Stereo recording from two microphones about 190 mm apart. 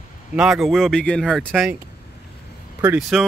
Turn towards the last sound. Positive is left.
turn(degrees=0)  # may be behind; listen again after turning